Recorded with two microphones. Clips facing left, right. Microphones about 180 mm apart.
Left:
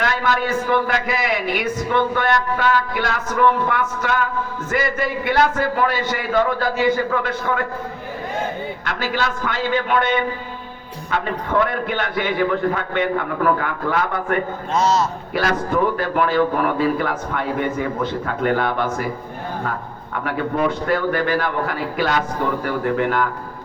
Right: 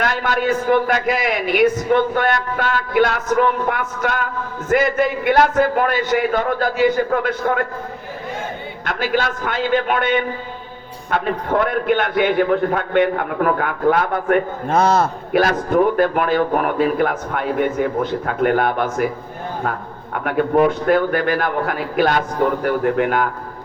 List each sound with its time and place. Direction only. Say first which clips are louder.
0.0 s a man's voice: right 1 dB; 50° right (ahead or behind)
8.8 s a man's voice: right 5 dB; 50° right (ahead or behind)
20.1 s a man's voice: right 6 dB; 55° right (ahead or behind)